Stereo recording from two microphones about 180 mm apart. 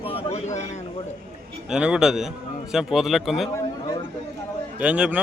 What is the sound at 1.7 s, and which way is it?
Speech, 5° right (ahead or behind).